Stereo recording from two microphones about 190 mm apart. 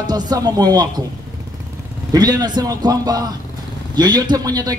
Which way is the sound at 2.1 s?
20° right (ahead or behind).